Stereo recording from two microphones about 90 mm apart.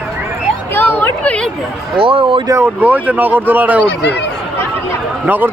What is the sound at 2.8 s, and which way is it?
Speech, 20° right (ahead or behind).